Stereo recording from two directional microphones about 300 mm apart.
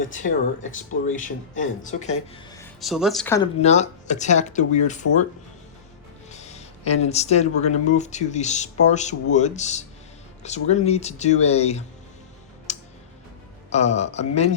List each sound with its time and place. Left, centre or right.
0.0 s speech: left
2.8 s speech: centre
3.6 s speech: left
6.3 s speech: left
12.7 s tick: left
13.7 s speech: left